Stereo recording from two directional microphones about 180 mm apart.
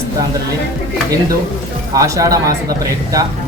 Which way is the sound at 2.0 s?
20° right (ahead or behind).